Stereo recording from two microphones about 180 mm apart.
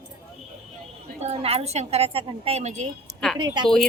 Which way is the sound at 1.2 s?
35° right (ahead or behind).